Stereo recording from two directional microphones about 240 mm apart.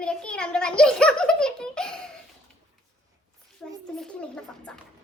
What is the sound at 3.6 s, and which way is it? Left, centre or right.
A child's voice, centre.